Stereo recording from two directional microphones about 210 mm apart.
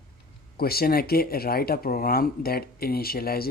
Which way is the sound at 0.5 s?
45° left (ahead or behind).